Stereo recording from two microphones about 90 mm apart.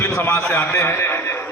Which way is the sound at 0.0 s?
30° left (ahead or behind).